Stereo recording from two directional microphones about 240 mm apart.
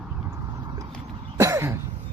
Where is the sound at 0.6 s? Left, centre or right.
Centre.